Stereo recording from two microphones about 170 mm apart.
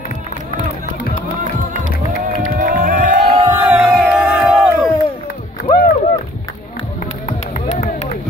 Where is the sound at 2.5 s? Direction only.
55° right (ahead or behind).